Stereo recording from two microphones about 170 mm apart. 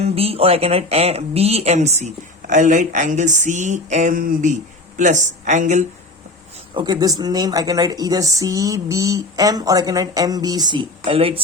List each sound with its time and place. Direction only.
0.0 s speech: 35° right (ahead or behind)
6.7 s a woman's voice: 25° right (ahead or behind)